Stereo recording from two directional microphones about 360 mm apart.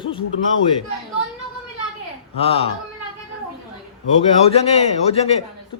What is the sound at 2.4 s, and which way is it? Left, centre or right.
Speech, centre.